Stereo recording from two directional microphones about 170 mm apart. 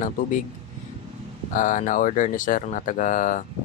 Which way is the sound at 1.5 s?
50° left (ahead or behind).